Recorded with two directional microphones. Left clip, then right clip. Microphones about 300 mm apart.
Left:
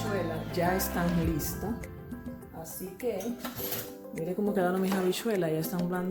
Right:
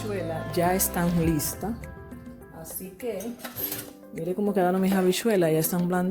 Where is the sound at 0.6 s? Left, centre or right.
Right.